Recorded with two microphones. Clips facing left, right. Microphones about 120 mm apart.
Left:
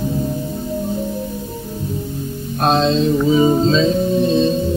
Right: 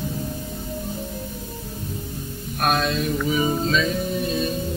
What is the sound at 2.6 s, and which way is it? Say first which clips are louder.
Music: left 7 dB; 25° left (ahead or behind).